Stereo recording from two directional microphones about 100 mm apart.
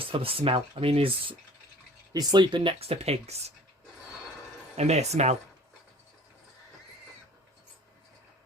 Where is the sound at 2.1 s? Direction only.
45° right (ahead or behind).